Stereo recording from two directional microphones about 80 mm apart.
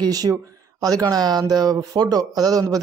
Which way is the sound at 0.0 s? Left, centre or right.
Right.